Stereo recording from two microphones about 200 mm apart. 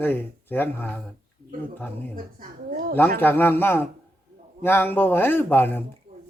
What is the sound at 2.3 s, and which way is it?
Speech, 45° right (ahead or behind).